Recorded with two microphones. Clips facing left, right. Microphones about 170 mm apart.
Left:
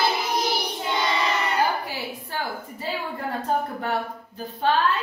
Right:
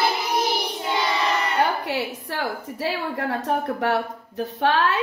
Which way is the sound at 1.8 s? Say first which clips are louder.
Right 5 dB; 75° right (ahead or behind).